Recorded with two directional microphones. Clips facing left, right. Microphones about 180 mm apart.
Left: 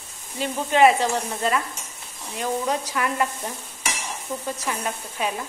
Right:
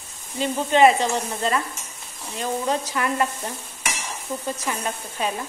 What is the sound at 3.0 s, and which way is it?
Cutlery, 5° left (ahead or behind).